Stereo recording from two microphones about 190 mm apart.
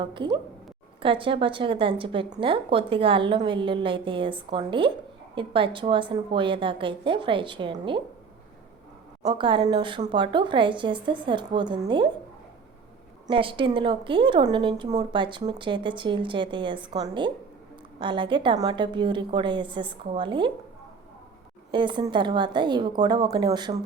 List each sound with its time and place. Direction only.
0.0 s speech: 25° right (ahead or behind)
9.2 s speech: 25° right (ahead or behind)
13.2 s speech: 25° right (ahead or behind)
21.7 s speech: 25° right (ahead or behind)